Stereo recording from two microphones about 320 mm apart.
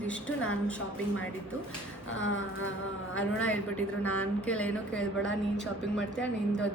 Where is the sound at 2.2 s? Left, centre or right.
Left.